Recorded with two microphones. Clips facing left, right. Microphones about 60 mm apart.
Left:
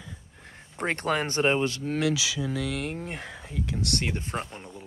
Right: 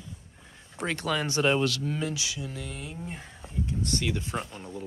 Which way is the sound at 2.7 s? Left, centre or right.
Left.